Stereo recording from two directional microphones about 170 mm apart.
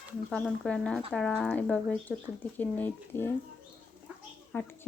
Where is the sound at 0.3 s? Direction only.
5° left (ahead or behind).